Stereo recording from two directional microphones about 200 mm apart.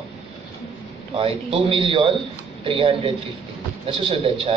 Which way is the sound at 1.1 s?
30° right (ahead or behind).